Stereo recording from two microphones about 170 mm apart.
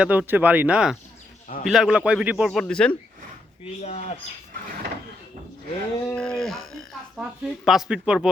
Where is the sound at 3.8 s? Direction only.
40° left (ahead or behind).